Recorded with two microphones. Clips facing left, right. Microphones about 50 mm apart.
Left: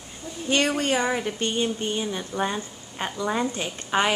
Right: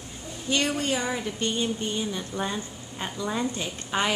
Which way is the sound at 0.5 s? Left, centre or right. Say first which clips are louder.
Left 3 dB; left.